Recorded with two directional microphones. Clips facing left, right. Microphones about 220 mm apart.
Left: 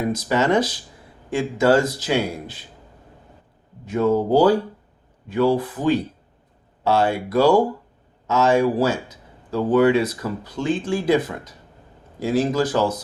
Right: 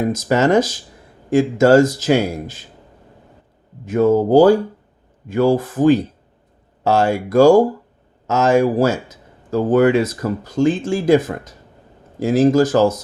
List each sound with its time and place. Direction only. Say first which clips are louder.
0.1 s speech: right 4 dB; 45° right (ahead or behind)
3.8 s speech: right 5 dB; 50° right (ahead or behind)